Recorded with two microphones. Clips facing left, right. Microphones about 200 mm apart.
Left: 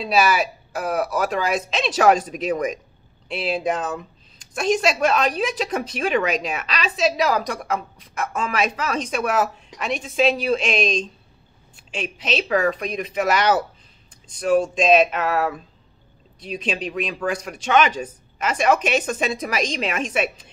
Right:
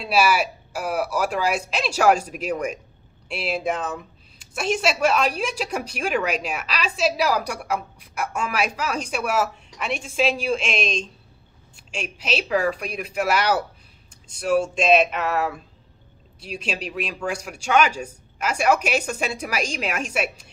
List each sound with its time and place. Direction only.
0.0 s a woman's voice: 10° right (ahead or behind)
11.9 s a woman's voice: centre (ahead or behind)